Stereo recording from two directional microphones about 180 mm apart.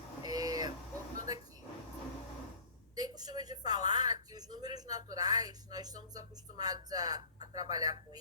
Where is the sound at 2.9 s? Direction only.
20° right (ahead or behind).